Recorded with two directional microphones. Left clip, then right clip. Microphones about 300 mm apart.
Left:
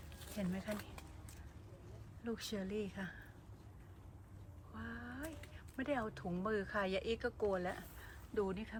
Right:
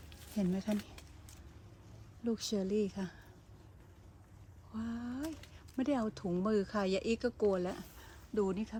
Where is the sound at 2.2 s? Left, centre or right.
Centre.